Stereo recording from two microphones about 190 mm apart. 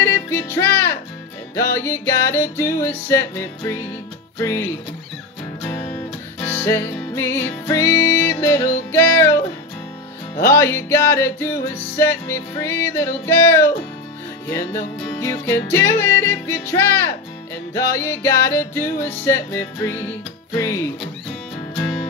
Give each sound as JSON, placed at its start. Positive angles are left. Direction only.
{"t": 0.0, "sound": "music", "side_deg": 10}
{"t": 6.4, "sound": "music", "side_deg": 10}
{"t": 10.5, "sound": "music", "side_deg": 15}